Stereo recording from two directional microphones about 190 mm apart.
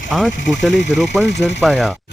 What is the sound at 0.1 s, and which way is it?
Speech, centre (ahead or behind).